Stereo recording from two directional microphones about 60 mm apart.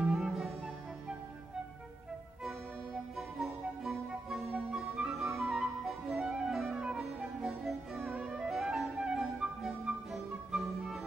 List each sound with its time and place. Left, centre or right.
0.0 s music: centre
3.2 s music: centre
4.5 s music: right
4.7 s music: centre
5.4 s flute: centre
7.0 s music: centre
8.1 s music: centre
8.5 s flute: centre
10.1 s music: centre